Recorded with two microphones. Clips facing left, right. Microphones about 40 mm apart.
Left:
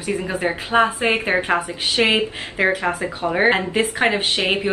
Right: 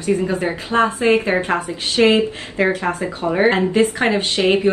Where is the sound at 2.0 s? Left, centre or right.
Left.